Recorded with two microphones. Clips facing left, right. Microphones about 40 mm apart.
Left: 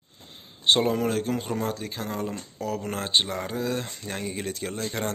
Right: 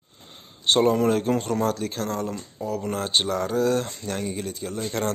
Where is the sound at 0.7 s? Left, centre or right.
Centre.